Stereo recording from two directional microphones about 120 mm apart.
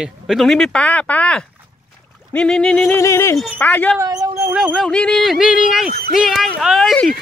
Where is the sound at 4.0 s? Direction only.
30° right (ahead or behind).